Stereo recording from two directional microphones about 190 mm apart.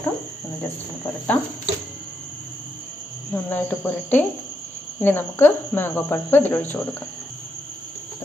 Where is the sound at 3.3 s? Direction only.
10° left (ahead or behind).